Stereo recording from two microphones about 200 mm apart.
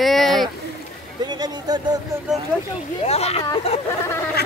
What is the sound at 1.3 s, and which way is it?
Speech, 20° right (ahead or behind).